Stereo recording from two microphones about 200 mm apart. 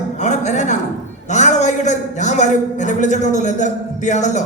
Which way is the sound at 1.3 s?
35° left (ahead or behind).